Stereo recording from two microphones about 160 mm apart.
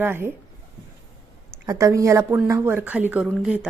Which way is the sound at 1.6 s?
20° right (ahead or behind).